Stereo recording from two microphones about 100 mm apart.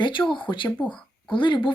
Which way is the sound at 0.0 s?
50° left (ahead or behind).